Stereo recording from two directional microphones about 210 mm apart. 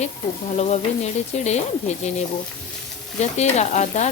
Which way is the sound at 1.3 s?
30° left (ahead or behind).